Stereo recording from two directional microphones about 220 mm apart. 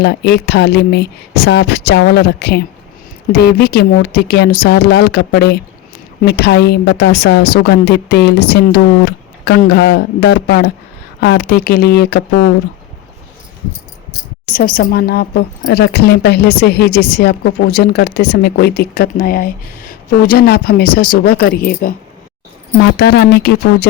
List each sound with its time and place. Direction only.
0.0 s a woman's voice: 50° left (ahead or behind)
14.5 s a woman's voice: 40° left (ahead or behind)